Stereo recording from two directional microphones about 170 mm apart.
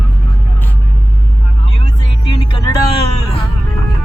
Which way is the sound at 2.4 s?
25° left (ahead or behind).